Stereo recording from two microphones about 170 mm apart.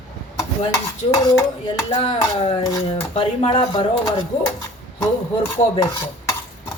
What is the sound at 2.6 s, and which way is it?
Speech, 25° left (ahead or behind).